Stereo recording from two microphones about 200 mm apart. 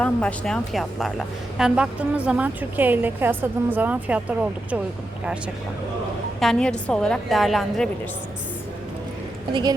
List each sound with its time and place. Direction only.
0.0 s a woman's voice: 5° left (ahead or behind)
6.4 s a woman's voice: 5° left (ahead or behind)
9.5 s a woman's voice: 25° right (ahead or behind)